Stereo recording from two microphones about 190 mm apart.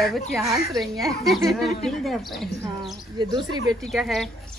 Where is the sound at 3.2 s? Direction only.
25° right (ahead or behind).